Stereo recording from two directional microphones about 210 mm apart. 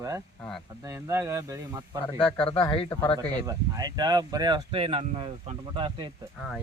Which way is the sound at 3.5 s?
20° right (ahead or behind).